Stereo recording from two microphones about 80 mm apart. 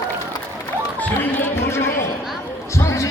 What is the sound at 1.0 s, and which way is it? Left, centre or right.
Music, centre.